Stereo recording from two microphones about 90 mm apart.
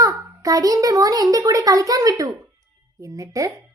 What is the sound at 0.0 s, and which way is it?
A child's voice, 40° right (ahead or behind).